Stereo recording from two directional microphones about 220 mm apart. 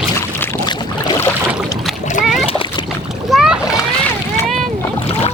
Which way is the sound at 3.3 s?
5° right (ahead or behind).